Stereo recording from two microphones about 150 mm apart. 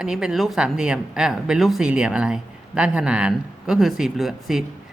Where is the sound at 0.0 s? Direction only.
5° right (ahead or behind).